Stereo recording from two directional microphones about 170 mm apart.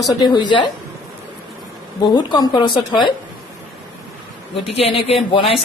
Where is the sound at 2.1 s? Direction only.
25° left (ahead or behind).